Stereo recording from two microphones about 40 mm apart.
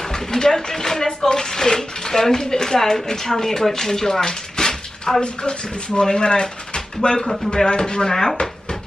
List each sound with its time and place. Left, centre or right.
0.0 s speech: centre
8.1 s speech: centre